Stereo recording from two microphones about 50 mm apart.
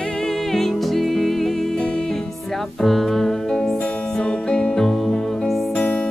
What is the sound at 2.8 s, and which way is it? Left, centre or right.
Music, centre.